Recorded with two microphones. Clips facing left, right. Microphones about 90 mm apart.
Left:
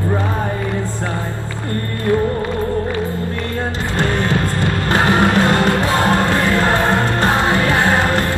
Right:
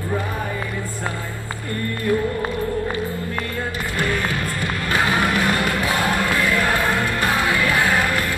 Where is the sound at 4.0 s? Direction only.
25° left (ahead or behind).